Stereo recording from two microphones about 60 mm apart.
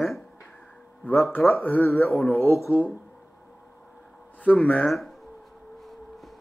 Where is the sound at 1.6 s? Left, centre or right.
Left.